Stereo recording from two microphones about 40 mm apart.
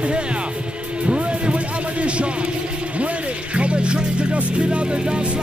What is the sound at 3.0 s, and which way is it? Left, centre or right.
Speech, right.